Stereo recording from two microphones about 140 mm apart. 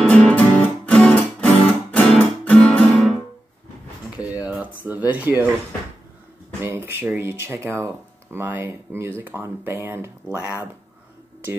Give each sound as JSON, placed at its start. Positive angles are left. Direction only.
{"t": 0.1, "sound": "music", "side_deg": 10}
{"t": 2.4, "sound": "guitar", "side_deg": 10}
{"t": 4.5, "sound": "a sound", "side_deg": -10}
{"t": 6.9, "sound": "speech", "side_deg": -15}